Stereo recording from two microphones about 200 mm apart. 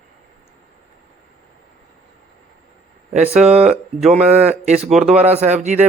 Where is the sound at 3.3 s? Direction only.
5° right (ahead or behind).